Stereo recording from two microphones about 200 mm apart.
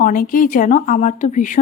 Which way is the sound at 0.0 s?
40° left (ahead or behind).